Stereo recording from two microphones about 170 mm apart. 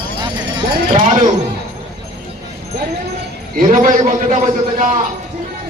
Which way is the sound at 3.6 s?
55° right (ahead or behind).